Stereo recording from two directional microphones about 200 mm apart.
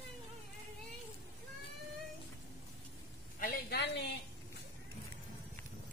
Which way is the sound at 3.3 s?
50° left (ahead or behind).